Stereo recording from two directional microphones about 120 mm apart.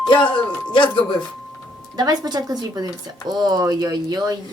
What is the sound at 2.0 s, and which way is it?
Speech, 35° right (ahead or behind).